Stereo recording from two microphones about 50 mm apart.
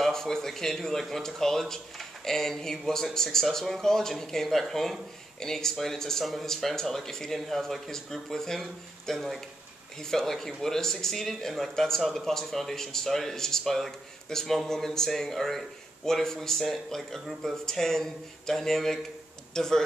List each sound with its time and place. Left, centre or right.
0.0 s speech: centre